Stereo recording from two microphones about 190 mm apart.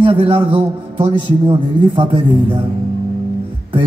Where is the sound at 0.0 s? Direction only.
30° right (ahead or behind).